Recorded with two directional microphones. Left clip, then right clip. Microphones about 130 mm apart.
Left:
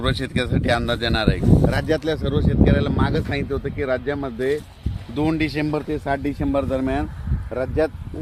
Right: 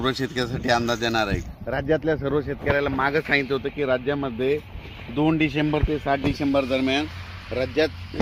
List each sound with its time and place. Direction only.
0.0 s speech: 45° left (ahead or behind); by 3.4 s 30° left (ahead or behind)
3.5 s speech: 5° left (ahead or behind)
5.1 s speech: 10° right (ahead or behind)